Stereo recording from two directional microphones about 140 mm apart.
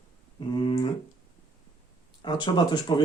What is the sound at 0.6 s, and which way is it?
Speech, 40° left (ahead or behind).